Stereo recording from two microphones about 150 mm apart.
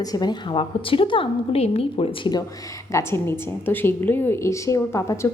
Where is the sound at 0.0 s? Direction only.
25° left (ahead or behind).